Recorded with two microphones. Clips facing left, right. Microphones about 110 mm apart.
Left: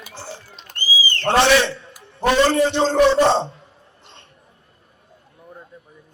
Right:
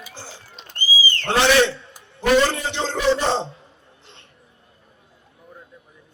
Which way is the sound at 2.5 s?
50° left (ahead or behind).